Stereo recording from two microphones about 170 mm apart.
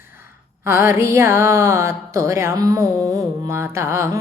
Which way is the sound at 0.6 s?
15° right (ahead or behind).